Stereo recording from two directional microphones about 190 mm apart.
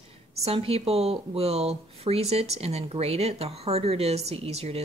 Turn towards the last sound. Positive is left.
turn(degrees=-35)  # may be behind; listen again after turning